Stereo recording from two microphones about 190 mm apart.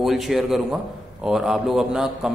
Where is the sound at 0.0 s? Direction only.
Centre (ahead or behind).